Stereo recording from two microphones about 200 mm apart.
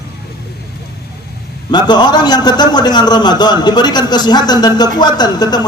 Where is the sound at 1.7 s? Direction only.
20° left (ahead or behind).